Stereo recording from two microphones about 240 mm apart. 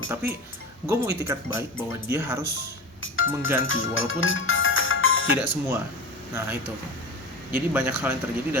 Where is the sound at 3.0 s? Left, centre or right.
Left.